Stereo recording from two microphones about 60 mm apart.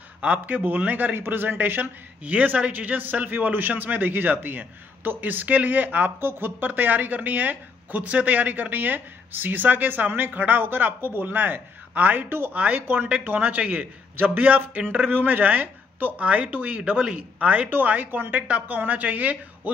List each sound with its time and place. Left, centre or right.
0.2 s a man's voice: right